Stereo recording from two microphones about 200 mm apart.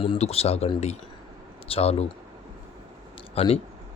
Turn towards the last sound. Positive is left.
turn(degrees=30)  # may be behind; listen again after turning